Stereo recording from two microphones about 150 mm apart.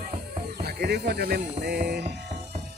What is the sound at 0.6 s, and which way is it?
Speech, 90° right.